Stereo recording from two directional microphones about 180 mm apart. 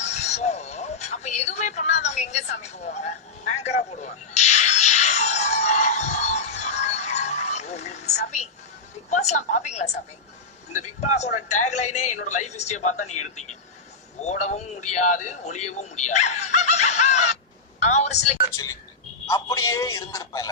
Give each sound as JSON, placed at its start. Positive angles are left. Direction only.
{"t": 0.0, "sound": "a sound", "side_deg": 40}
{"t": 9.0, "sound": "a woman's voice", "side_deg": 40}
{"t": 18.5, "sound": "speech", "side_deg": 20}